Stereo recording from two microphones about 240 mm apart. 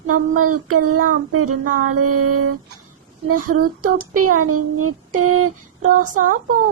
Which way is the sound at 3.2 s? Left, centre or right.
Right.